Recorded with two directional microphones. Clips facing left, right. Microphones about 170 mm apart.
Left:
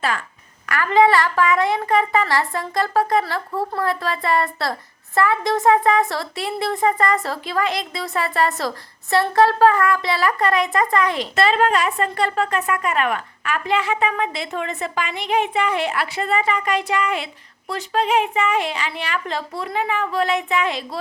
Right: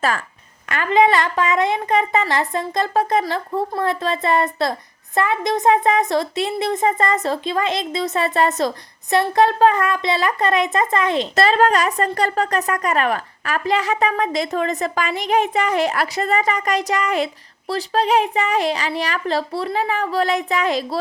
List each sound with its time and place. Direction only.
0.7 s speech: 20° right (ahead or behind)
11.3 s a woman's voice: 40° right (ahead or behind)